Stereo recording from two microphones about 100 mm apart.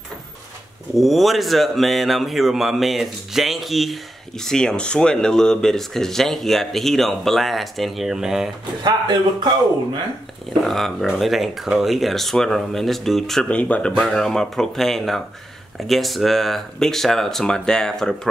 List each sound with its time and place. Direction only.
0.9 s speech: centre (ahead or behind)
8.8 s speech: 45° right (ahead or behind)
10.6 s speech: centre (ahead or behind)
13.6 s speech: 15° left (ahead or behind)